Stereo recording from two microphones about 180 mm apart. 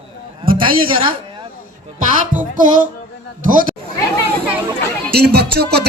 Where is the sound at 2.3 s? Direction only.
10° right (ahead or behind).